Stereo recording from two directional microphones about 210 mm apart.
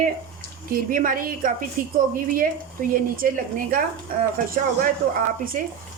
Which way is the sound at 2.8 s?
40° right (ahead or behind).